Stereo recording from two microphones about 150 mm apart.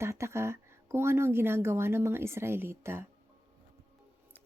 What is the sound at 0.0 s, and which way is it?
Speech, 20° right (ahead or behind).